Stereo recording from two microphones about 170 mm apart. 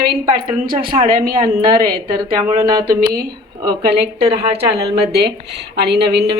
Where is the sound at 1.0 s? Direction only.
55° right (ahead or behind).